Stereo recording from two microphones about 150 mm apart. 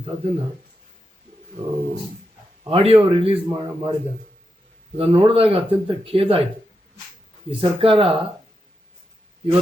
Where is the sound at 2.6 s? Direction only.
40° right (ahead or behind).